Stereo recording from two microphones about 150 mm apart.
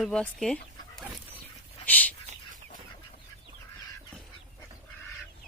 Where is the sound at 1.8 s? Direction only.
10° left (ahead or behind).